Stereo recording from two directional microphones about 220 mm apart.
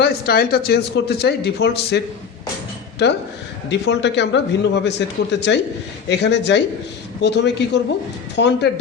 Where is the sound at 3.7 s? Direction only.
50° left (ahead or behind).